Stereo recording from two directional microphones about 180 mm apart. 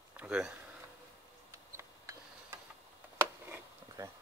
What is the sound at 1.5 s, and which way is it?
Tick-tock, 15° right (ahead or behind).